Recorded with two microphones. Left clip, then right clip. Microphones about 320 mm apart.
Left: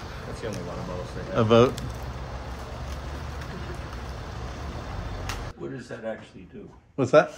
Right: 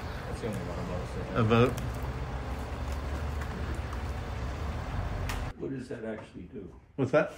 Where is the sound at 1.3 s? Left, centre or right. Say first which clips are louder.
Left 7 dB; centre.